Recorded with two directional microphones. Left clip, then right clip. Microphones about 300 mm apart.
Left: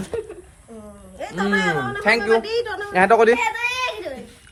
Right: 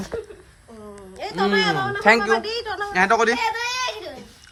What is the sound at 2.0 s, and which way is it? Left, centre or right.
Speech, right.